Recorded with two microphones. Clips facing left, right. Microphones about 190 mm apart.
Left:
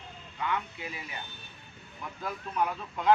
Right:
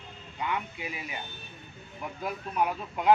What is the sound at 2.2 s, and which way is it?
Speech, 15° right (ahead or behind).